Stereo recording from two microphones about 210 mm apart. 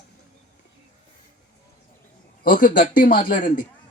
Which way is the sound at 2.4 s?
40° left (ahead or behind).